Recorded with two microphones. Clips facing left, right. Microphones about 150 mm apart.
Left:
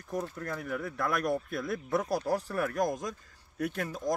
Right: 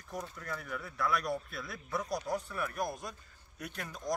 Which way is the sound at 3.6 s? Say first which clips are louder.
Left 10 dB; 55° left (ahead or behind).